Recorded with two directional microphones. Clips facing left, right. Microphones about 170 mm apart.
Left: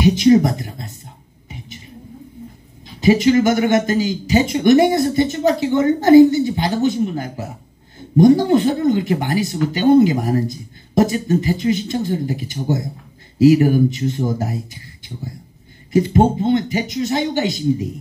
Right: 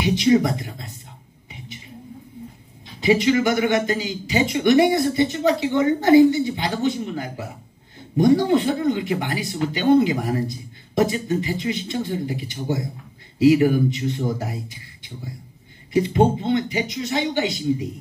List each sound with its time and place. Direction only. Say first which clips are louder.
0.0 s speech: left 5 dB; 45° left (ahead or behind)
3.0 s speech: left 4 dB; 45° left (ahead or behind)
15.9 s speech: left 3 dB; 45° left (ahead or behind)